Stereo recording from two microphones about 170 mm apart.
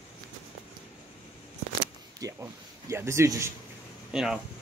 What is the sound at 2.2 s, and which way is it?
A man's voice, 20° right (ahead or behind).